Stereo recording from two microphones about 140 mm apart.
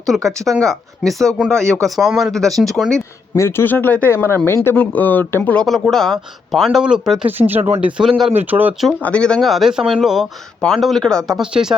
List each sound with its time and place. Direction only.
0.1 s speech: centre (ahead or behind)
3.3 s speech: 15° left (ahead or behind)
5.6 s speech: centre (ahead or behind)
9.0 s speech: 10° left (ahead or behind)